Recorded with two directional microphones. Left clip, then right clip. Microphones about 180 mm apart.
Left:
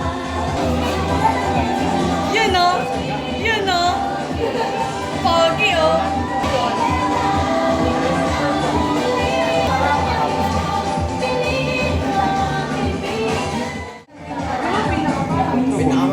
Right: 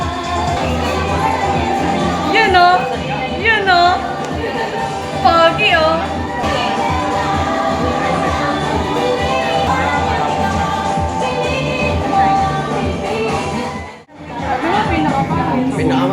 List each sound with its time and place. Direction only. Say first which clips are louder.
2.3 s music: right 6 dB; 35° right (ahead or behind)
5.2 s music: right 5 dB; 35° right (ahead or behind)